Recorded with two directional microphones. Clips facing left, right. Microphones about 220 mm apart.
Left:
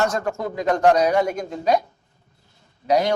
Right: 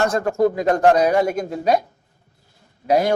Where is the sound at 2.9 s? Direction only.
50° right (ahead or behind).